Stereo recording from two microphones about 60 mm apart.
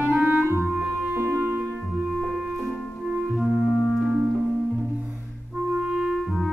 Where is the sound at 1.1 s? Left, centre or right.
Right.